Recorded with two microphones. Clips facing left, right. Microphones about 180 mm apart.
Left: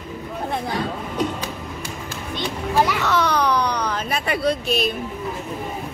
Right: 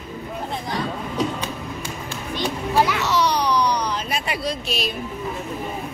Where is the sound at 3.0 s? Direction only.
55° left (ahead or behind).